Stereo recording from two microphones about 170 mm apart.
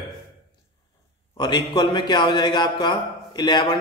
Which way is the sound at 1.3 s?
25° left (ahead or behind).